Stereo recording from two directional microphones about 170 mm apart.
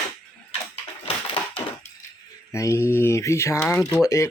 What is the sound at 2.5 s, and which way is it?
Speech, 15° left (ahead or behind).